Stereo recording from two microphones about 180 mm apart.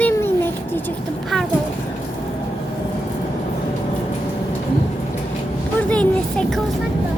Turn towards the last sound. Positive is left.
turn(degrees=5)  # may be behind; listen again after turning